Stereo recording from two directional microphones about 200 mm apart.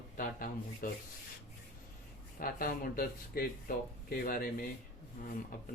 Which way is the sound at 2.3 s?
45° left (ahead or behind).